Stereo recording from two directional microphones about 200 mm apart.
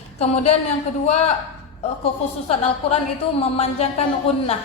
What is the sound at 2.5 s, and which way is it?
A woman's voice, 30° left (ahead or behind).